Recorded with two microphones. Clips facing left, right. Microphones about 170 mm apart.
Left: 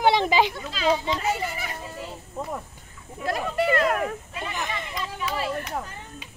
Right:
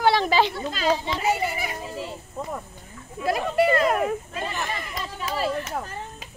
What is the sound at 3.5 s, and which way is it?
Speech, 10° right (ahead or behind).